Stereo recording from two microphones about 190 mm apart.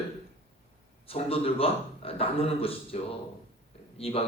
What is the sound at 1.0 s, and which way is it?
Speech, 30° left (ahead or behind).